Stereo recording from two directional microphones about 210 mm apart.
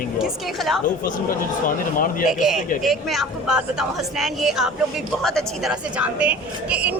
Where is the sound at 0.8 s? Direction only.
40° left (ahead or behind).